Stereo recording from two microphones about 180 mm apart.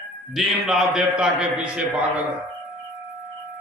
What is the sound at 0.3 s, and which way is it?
A man's voice, centre (ahead or behind).